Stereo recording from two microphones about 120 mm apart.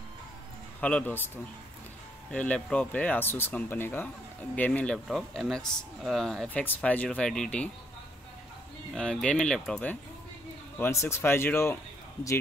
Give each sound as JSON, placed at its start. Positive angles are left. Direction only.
{"t": 0.7, "sound": "speech", "side_deg": 10}
{"t": 4.9, "sound": "speech", "side_deg": 0}
{"t": 8.9, "sound": "speech", "side_deg": 5}
{"t": 10.8, "sound": "speech", "side_deg": 20}